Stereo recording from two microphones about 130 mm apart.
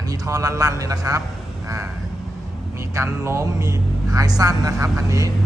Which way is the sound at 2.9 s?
20° right (ahead or behind).